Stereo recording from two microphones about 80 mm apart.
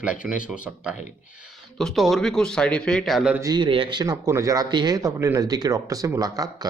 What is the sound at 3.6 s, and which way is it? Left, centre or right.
Speech, right.